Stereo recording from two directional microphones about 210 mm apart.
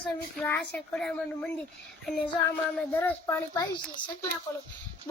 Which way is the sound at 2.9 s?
10° left (ahead or behind).